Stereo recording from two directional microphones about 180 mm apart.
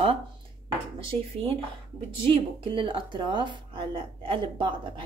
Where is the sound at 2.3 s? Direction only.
30° right (ahead or behind).